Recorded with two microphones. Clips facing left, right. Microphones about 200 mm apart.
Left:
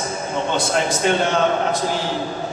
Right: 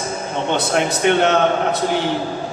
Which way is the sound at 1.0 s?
65° right (ahead or behind).